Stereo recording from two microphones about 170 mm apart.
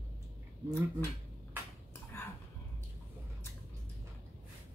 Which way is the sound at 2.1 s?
15° left (ahead or behind).